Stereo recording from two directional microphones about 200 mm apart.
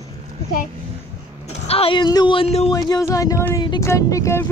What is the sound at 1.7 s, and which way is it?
Speech, 25° left (ahead or behind).